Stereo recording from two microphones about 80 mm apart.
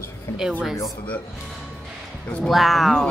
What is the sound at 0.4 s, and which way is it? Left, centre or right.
Speech, centre.